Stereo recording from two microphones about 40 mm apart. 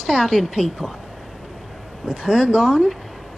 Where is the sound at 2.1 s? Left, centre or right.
Centre.